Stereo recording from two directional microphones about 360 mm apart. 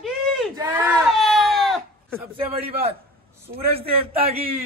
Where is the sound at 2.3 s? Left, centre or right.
Centre.